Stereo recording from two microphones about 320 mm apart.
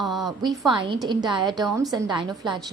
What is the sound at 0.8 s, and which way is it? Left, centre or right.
A woman's voice, centre.